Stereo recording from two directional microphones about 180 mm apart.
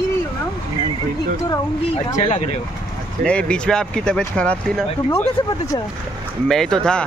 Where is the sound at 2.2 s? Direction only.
40° left (ahead or behind).